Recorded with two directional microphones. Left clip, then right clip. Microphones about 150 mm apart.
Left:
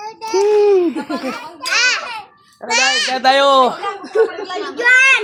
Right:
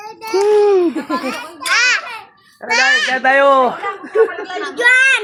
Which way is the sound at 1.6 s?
35° right (ahead or behind).